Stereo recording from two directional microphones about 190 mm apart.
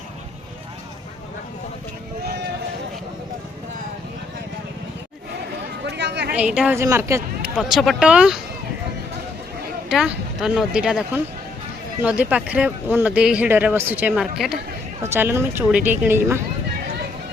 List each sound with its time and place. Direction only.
5.8 s chatter: 65° right (ahead or behind)
6.3 s speech: 5° right (ahead or behind)
9.9 s speech: 5° right (ahead or behind)
15.0 s speech: 10° right (ahead or behind)